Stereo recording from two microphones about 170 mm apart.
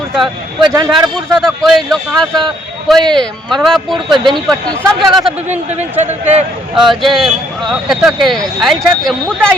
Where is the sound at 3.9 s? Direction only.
25° right (ahead or behind).